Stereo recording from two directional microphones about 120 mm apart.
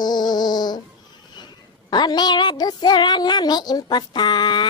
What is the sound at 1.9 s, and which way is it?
Child singing, 35° left (ahead or behind).